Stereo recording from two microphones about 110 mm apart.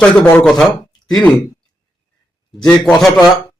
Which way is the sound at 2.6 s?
5° left (ahead or behind).